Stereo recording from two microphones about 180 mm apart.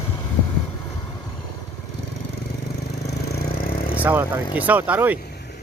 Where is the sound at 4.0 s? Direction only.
10° right (ahead or behind).